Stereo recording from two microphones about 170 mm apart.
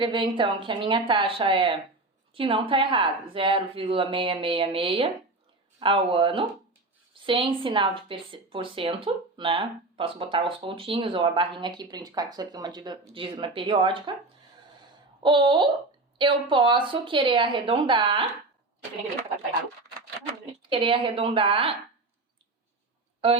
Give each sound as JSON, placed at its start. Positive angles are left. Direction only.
{"t": 0.0, "sound": "speech", "side_deg": -30}
{"t": 15.2, "sound": "speech", "side_deg": -30}
{"t": 20.6, "sound": "speech", "side_deg": -30}